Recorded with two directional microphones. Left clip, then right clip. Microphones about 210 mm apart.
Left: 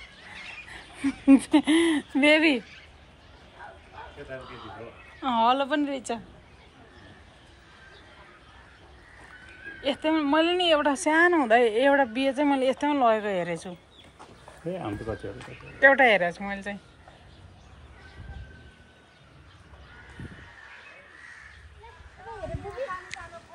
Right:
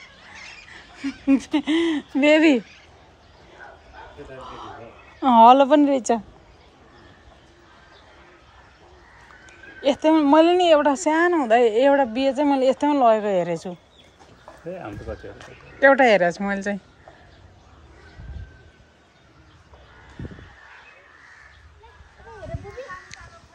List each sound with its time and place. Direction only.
0.7 s speech: 10° right (ahead or behind); by 2.6 s 25° right (ahead or behind)
4.4 s a woman's voice: 40° right (ahead or behind)
9.8 s speech: 30° right (ahead or behind)
15.8 s speech: 20° right (ahead or behind)
23.1 s music: 5° right (ahead or behind)